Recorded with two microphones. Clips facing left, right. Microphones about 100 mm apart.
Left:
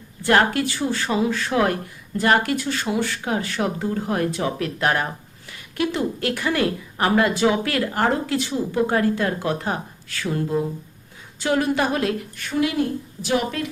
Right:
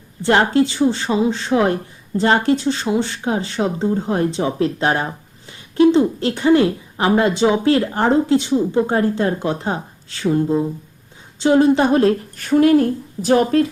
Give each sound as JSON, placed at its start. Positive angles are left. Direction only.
{"t": 0.2, "sound": "a woman's voice", "side_deg": -25}